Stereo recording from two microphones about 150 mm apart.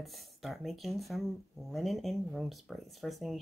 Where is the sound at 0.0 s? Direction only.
Centre (ahead or behind).